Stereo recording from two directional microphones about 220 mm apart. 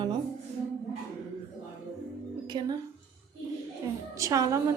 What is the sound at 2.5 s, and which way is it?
Speech, 20° right (ahead or behind).